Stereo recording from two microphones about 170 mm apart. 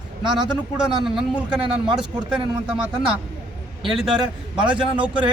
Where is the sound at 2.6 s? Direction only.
5° right (ahead or behind).